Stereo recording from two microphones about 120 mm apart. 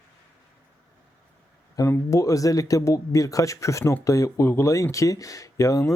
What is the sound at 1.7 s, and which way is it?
Speech, 25° left (ahead or behind).